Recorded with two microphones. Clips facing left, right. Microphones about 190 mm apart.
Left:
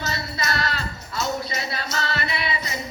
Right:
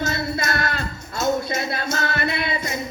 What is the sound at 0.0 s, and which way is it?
Music, 50° right (ahead or behind).